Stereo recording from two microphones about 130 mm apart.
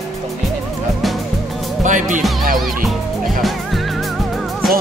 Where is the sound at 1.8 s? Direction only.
75° right (ahead or behind).